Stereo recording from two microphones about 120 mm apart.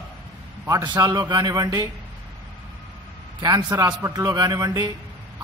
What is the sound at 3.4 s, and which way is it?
A man's voice, 35° right (ahead or behind).